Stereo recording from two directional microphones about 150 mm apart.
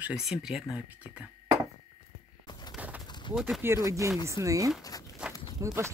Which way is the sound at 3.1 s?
30° left (ahead or behind).